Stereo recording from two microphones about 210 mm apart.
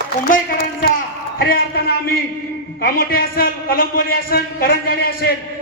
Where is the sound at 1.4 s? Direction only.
45° left (ahead or behind).